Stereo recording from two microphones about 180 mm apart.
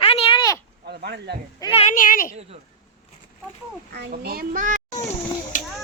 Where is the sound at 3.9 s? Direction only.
60° right (ahead or behind).